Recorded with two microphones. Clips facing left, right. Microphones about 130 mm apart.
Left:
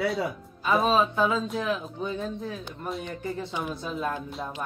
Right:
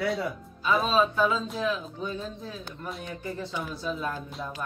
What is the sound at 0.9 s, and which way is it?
Speech, 20° left (ahead or behind).